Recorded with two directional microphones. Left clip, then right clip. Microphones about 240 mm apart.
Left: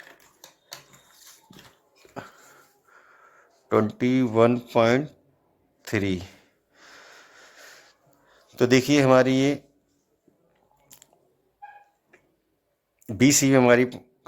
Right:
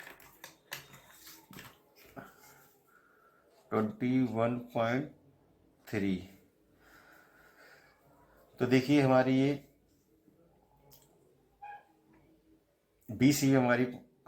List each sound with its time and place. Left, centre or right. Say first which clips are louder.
2.2 s dog: left 10 dB; left
3.7 s a man's voice: left 10 dB; left
8.5 s speech: left 8 dB; left
13.1 s speech: left 8 dB; left